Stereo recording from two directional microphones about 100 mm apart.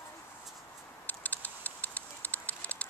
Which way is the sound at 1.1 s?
15° left (ahead or behind).